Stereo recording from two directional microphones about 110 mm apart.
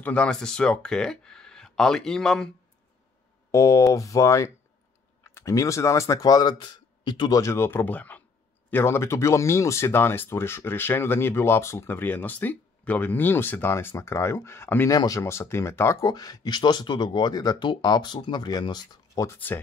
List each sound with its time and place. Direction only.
0.0 s speech: 10° left (ahead or behind)
3.5 s speech: 30° left (ahead or behind)
14.9 s speech: 30° left (ahead or behind)
16.1 s speech: 35° left (ahead or behind)
19.2 s speech: 15° left (ahead or behind)